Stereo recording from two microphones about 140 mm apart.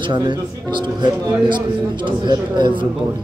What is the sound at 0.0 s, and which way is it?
A man's voice, 35° right (ahead or behind).